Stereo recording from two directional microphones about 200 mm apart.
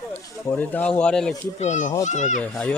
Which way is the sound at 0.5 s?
10° left (ahead or behind).